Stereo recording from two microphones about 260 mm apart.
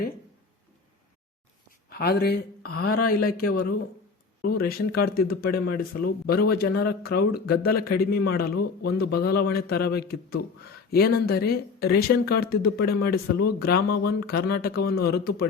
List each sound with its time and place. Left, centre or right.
1.9 s speech: left